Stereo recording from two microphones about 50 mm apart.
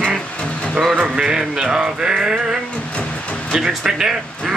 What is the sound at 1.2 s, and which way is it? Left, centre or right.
Music, centre.